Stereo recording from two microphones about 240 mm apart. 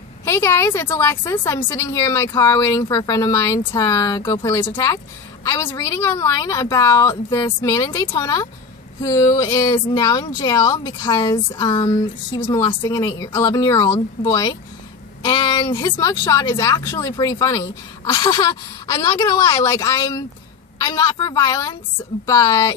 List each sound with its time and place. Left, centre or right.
0.2 s a woman's voice: centre